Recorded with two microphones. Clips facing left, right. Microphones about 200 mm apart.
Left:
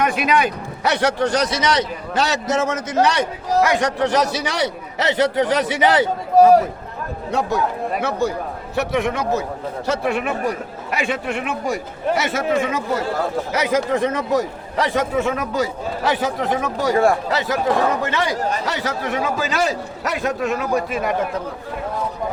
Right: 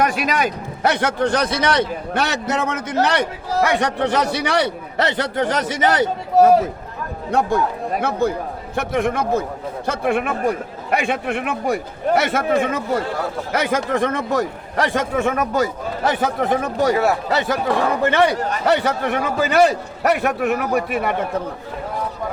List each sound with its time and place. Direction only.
0.0 s a man's voice: 40° right (ahead or behind)
7.3 s a man's voice: 55° right (ahead or behind)
8.7 s a man's voice: 50° right (ahead or behind)